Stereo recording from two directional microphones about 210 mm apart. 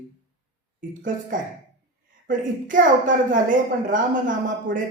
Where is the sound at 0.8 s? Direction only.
40° right (ahead or behind).